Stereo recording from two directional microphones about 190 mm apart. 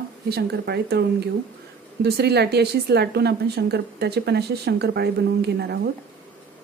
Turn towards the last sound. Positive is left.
turn(degrees=-60)  # may be behind; listen again after turning